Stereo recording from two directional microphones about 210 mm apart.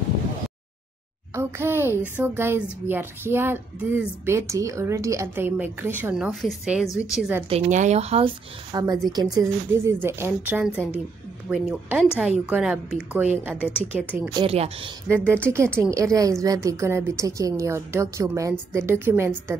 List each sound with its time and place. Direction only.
1.3 s a woman's voice: 10° right (ahead or behind)
7.4 s speech: 30° right (ahead or behind)
8.7 s a woman's voice: 15° right (ahead or behind)
13.6 s a woman's voice: 10° left (ahead or behind)
13.9 s a woman's voice: 5° right (ahead or behind)
14.3 s speech: 25° right (ahead or behind)
15.0 s a woman's voice: 10° right (ahead or behind)